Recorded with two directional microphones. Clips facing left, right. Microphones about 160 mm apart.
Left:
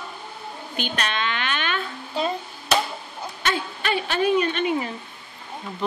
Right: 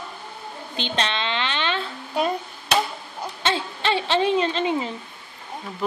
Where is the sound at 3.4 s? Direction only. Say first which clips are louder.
Right 2 dB; 25° right (ahead or behind).